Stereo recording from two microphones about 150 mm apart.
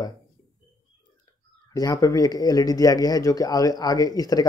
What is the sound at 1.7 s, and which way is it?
Speech, 25° left (ahead or behind).